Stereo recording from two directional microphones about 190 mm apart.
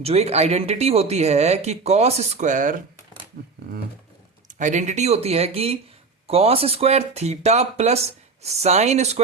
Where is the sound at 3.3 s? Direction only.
50° right (ahead or behind).